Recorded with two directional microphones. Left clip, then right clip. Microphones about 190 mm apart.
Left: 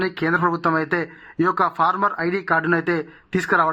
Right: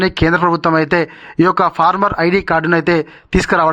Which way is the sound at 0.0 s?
35° right (ahead or behind).